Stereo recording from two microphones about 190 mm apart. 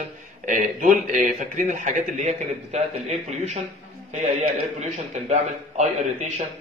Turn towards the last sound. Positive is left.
turn(degrees=-40)  # may be behind; listen again after turning